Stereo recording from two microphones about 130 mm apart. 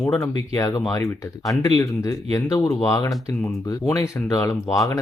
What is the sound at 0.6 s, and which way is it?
Speech, 30° left (ahead or behind).